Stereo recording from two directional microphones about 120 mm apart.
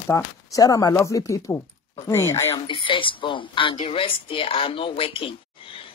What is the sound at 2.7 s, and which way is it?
Speech, 45° left (ahead or behind).